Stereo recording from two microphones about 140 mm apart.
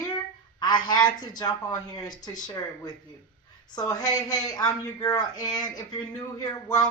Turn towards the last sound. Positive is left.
turn(degrees=30)  # may be behind; listen again after turning